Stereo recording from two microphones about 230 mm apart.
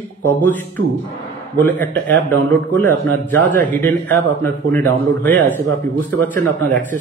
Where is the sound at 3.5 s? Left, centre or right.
Right.